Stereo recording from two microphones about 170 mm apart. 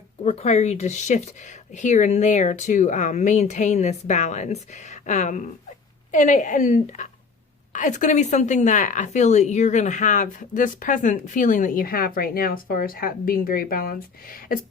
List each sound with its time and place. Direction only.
0.3 s a woman's voice: 40° left (ahead or behind); by 14.6 s 55° left (ahead or behind)